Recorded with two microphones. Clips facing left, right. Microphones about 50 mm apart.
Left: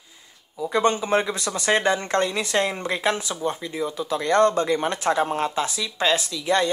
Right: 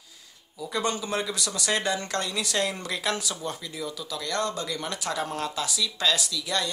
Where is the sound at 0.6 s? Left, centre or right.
Left.